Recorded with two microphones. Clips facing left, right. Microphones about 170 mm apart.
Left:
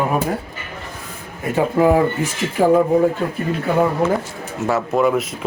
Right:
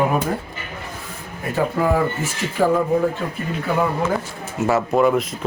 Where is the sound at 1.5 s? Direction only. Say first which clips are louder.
Left 4 dB; 20° left (ahead or behind).